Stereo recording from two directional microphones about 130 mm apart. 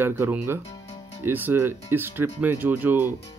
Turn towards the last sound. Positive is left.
turn(degrees=-15)  # may be behind; listen again after turning